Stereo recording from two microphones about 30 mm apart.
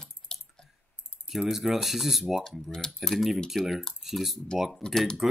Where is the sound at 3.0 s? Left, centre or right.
Centre.